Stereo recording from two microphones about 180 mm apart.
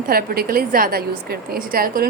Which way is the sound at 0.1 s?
55° right (ahead or behind).